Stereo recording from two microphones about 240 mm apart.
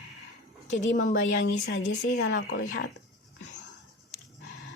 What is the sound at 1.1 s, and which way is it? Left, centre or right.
Speech, left.